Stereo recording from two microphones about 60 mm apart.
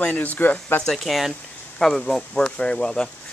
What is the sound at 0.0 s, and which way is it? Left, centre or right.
Speech, left.